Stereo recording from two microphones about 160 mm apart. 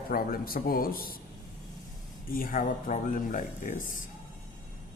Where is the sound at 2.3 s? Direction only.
60° left (ahead or behind).